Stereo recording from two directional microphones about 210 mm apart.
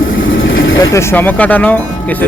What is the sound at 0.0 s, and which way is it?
Vehicle, 65° left (ahead or behind).